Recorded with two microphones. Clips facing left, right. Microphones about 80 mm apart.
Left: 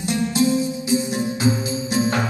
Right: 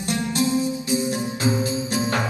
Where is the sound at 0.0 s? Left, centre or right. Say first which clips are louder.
Left 3 dB; left.